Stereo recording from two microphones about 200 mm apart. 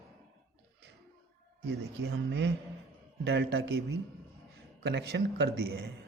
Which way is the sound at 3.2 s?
55° right (ahead or behind).